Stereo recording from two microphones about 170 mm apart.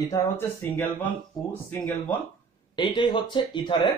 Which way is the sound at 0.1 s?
15° left (ahead or behind).